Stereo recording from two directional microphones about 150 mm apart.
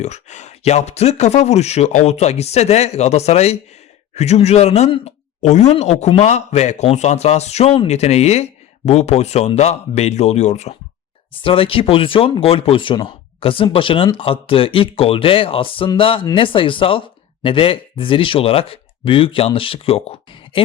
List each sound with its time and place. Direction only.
0.0 s speech: 50° left (ahead or behind)